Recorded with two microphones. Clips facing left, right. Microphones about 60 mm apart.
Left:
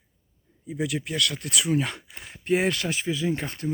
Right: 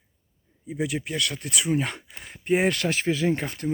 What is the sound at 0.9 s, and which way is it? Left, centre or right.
Speech, right.